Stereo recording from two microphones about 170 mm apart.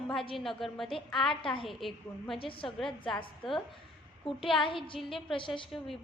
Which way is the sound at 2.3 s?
30° left (ahead or behind).